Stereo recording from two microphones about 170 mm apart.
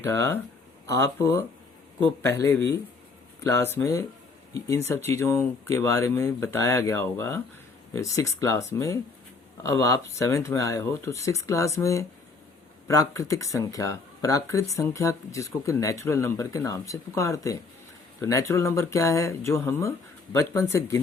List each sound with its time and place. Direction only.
0.0 s speech: 15° left (ahead or behind)